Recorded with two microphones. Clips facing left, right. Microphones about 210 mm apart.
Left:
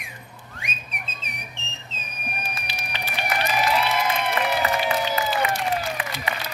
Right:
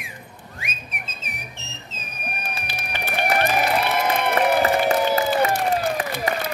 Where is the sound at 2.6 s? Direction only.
50° right (ahead or behind).